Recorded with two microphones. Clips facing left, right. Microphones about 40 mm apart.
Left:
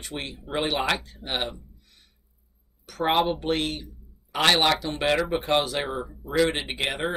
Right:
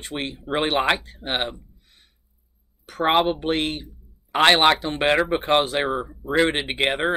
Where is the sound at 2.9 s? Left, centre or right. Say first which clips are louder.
Right 3 dB; right.